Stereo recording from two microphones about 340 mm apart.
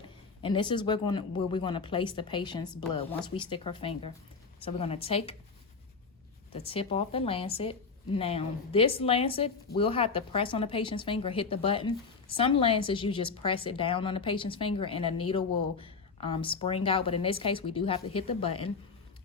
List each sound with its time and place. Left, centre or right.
0.4 s a woman's voice: centre
6.5 s a woman's voice: centre